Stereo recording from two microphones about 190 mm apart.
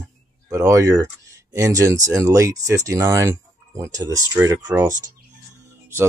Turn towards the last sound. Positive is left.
turn(degrees=-15)  # may be behind; listen again after turning